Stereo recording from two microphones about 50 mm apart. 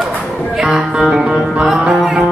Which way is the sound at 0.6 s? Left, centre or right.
Centre.